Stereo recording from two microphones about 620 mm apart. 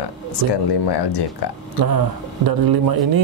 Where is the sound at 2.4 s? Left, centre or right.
Right.